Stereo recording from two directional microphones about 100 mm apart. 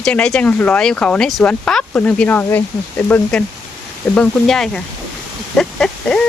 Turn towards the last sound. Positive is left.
turn(degrees=5)  # may be behind; listen again after turning